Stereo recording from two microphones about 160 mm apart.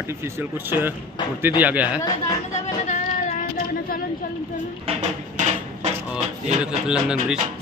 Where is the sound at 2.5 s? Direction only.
50° left (ahead or behind).